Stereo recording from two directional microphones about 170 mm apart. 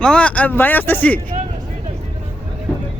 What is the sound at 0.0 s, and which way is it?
Speech, 5° left (ahead or behind).